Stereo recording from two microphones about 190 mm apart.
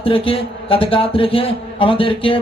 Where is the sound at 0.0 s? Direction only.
30° left (ahead or behind).